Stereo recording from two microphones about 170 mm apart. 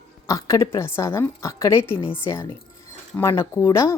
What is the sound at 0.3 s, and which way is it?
A woman's voice, 20° left (ahead or behind).